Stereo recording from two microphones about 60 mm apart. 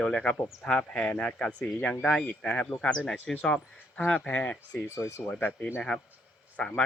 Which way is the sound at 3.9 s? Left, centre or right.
Left.